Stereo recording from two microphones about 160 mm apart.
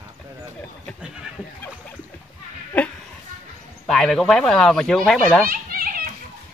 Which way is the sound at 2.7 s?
10° left (ahead or behind).